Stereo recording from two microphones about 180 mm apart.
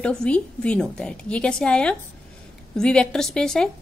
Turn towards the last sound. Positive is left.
turn(degrees=5)  # may be behind; listen again after turning